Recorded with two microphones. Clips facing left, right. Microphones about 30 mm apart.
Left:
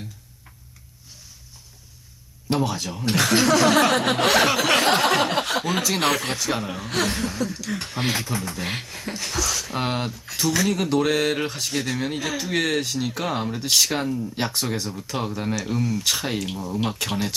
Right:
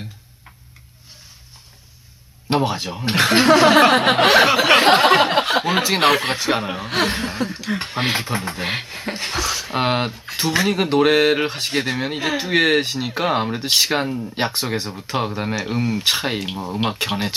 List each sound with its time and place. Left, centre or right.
2.5 s speech: right